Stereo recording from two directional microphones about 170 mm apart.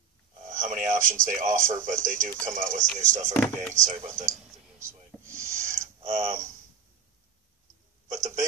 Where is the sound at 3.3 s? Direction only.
10° left (ahead or behind).